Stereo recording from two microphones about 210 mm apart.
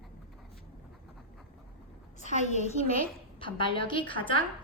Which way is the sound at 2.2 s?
35° left (ahead or behind).